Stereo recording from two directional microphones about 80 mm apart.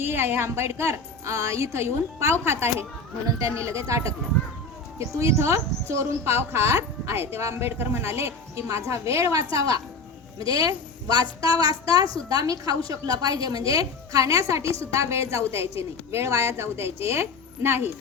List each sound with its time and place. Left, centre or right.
0.0 s a woman's voice: right
3.2 s a woman's voice: right